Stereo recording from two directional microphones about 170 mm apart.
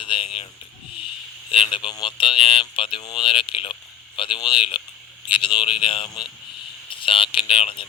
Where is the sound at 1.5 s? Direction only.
30° left (ahead or behind).